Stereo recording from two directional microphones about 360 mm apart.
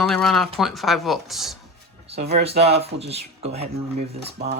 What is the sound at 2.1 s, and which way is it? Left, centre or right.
Speech, right.